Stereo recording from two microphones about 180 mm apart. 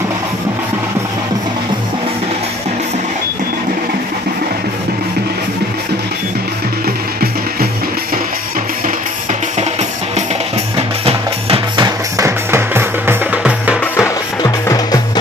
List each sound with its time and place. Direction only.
6.8 s music: 55° right (ahead or behind)
10.8 s music: 30° right (ahead or behind)
12.1 s music: 15° right (ahead or behind)
13.9 s music: 15° left (ahead or behind)